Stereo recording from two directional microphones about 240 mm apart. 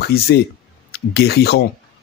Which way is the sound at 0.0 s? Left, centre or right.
Left.